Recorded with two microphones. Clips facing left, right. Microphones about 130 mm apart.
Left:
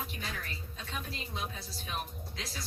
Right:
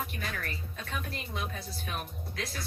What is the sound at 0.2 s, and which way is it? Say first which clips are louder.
Speech: right 3 dB; 60° right (ahead or behind).